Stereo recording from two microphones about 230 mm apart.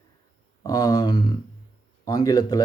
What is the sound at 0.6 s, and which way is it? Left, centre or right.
Speech, centre.